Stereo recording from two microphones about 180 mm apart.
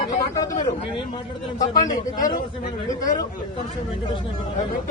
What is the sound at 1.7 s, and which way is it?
Speech, 20° left (ahead or behind).